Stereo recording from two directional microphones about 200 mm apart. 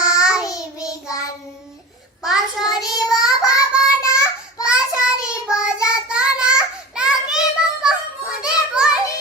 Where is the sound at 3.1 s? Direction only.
15° left (ahead or behind).